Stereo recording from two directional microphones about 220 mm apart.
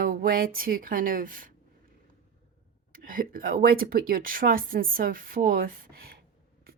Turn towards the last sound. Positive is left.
turn(degrees=-40)  # may be behind; listen again after turning